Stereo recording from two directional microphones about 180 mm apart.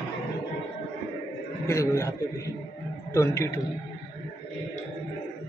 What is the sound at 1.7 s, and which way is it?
A man's voice, 15° left (ahead or behind).